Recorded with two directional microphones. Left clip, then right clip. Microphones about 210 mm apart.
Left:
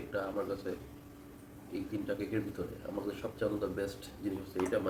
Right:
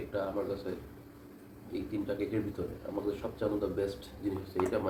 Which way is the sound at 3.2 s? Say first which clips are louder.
Right 2 dB; 30° left (ahead or behind).